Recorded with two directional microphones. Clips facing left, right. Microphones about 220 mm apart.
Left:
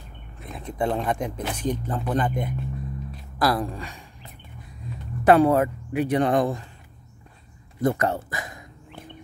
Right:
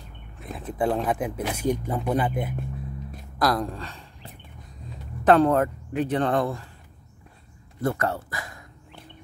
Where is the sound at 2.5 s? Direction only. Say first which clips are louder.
Left 2 dB; 50° right (ahead or behind).